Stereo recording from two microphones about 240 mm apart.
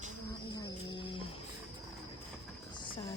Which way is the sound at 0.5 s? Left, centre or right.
Centre.